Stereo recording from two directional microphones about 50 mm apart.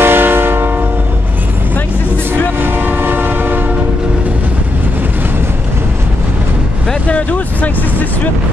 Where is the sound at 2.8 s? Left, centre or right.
Right.